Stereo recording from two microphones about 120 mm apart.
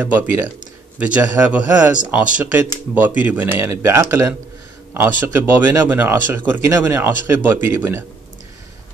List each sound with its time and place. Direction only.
0.0 s speech: 15° right (ahead or behind)